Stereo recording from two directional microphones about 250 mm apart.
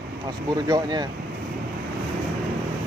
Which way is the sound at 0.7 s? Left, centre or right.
Centre.